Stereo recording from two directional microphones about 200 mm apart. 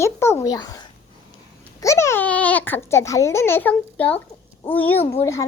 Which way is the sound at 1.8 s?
15° left (ahead or behind).